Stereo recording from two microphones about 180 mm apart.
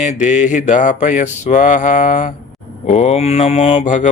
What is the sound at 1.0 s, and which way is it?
Mantra, 40° left (ahead or behind).